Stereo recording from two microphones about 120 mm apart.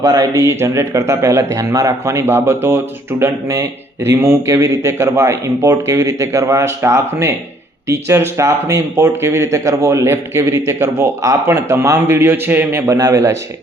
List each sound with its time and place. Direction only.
0.0 s a man's voice: 30° right (ahead or behind)